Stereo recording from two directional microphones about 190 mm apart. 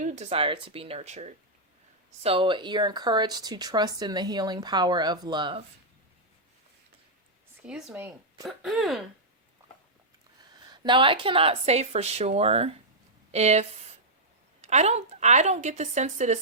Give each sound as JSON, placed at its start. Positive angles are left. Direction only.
{"t": 0.0, "sound": "a woman's voice", "side_deg": -35}
{"t": 7.6, "sound": "speech", "side_deg": -5}
{"t": 10.5, "sound": "a woman's voice", "side_deg": -25}